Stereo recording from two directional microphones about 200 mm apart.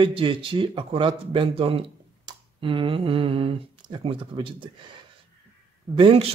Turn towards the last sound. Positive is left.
turn(degrees=-25)  # may be behind; listen again after turning